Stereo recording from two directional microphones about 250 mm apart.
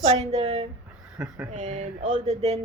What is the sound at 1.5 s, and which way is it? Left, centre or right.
A woman's voice, right.